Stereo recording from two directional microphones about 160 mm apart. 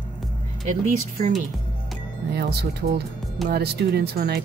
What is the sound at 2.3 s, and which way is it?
Speech, 80° right.